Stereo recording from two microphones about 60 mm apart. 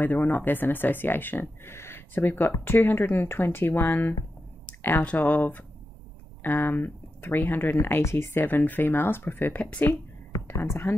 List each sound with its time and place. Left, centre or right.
0.0 s speech: left
4.6 s a sound: left
5.0 s speech: left
9.6 s speech: left
10.5 s speech: left